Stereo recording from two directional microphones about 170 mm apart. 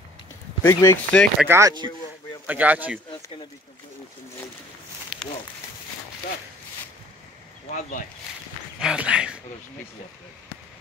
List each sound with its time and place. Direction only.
0.6 s speech: 15° left (ahead or behind)
1.5 s speech: 20° right (ahead or behind)
2.4 s speech: 10° right (ahead or behind)
5.1 s a sound: 5° right (ahead or behind)
8.7 s speech: 5° right (ahead or behind)